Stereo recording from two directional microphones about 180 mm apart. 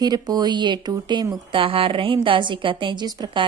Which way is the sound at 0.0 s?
20° right (ahead or behind).